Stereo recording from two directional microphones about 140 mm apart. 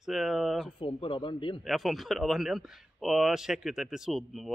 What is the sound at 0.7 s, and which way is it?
Speech, 40° left (ahead or behind).